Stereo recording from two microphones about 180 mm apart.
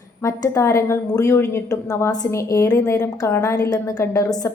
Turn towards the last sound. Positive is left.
turn(degrees=20)  # may be behind; listen again after turning